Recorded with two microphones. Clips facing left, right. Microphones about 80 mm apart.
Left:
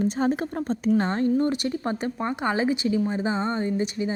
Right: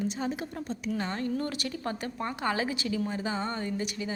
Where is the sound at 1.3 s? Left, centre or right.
Left.